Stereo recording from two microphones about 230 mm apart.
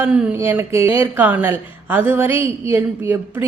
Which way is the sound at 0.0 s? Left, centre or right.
Centre.